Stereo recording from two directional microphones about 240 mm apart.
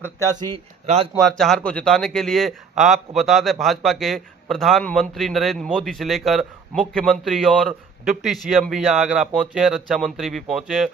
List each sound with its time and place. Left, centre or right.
0.0 s speech: centre
0.5 s speech: right
1.2 s a man's voice: centre